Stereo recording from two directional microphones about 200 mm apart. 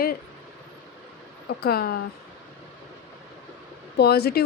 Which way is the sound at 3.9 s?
55° left (ahead or behind).